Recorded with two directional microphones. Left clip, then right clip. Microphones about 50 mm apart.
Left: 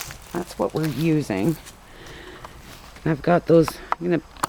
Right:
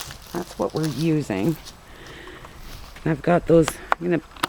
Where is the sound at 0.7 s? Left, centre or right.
Centre.